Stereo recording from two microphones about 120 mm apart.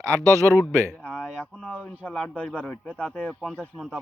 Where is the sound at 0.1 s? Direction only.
25° right (ahead or behind).